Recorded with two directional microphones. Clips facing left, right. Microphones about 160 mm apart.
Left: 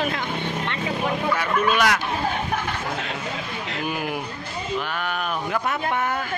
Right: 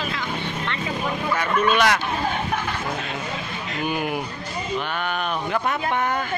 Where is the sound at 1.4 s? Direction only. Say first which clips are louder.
Right 3 dB; 5° left (ahead or behind).